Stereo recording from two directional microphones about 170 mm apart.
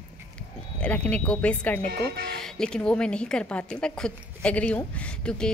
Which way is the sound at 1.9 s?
70° right (ahead or behind).